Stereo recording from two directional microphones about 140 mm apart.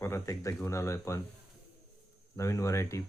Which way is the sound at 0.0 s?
20° left (ahead or behind).